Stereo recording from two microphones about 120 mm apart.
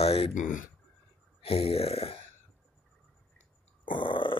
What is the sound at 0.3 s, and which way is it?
Speech, 90° left.